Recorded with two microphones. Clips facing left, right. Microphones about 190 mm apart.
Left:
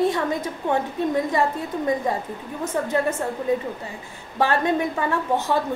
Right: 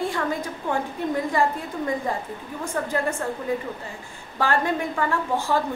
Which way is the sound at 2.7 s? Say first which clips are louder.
Left 3 dB; 20° left (ahead or behind).